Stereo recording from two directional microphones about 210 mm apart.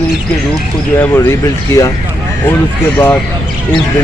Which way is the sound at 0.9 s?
10° left (ahead or behind).